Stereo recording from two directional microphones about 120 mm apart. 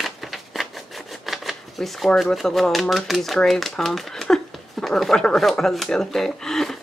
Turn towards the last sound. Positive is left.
turn(degrees=5)  # may be behind; listen again after turning